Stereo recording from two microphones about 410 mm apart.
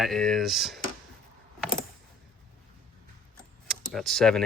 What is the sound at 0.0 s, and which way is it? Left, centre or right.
Speech, centre.